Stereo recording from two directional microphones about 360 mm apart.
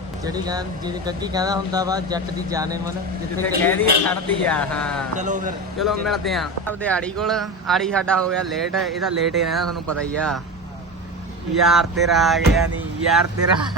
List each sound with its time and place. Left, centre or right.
0.3 s speech: centre
3.6 s speech: centre
5.1 s speech: centre
5.8 s speech: centre
11.6 s speech: centre